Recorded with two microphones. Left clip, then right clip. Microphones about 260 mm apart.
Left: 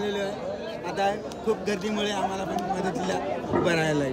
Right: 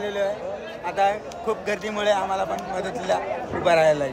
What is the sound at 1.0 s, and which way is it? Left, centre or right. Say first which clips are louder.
Speech: right 5 dB; centre.